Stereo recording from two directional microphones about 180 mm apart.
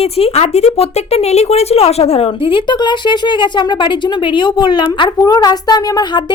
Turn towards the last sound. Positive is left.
turn(degrees=20)  # may be behind; listen again after turning